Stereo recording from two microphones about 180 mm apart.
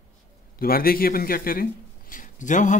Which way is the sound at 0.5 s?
55° left (ahead or behind).